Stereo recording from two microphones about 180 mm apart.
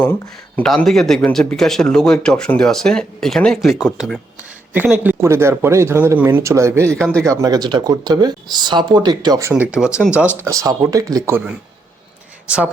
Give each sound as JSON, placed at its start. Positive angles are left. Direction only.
{"t": 0.0, "sound": "speech", "side_deg": 10}
{"t": 7.0, "sound": "speech", "side_deg": 5}
{"t": 7.3, "sound": "speech", "side_deg": -20}